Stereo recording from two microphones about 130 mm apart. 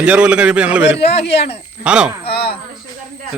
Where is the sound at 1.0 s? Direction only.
50° left (ahead or behind).